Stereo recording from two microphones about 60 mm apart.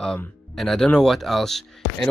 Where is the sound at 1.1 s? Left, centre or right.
Centre.